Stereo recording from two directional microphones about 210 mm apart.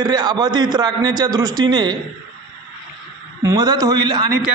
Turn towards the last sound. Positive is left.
turn(degrees=-20)  # may be behind; listen again after turning